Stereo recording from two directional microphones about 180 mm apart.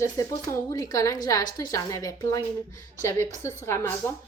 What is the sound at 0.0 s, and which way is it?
A woman's voice, 20° left (ahead or behind).